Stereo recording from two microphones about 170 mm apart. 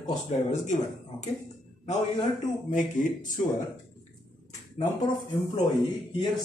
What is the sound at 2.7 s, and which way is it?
Speech, 50° left (ahead or behind).